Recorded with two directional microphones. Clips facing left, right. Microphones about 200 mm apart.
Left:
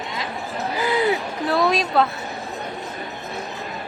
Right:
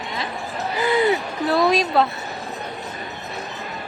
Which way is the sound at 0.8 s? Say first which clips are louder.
Right 2 dB; 5° left (ahead or behind).